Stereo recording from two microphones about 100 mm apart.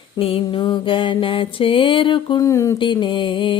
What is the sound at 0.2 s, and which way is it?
Mantra, 70° left (ahead or behind).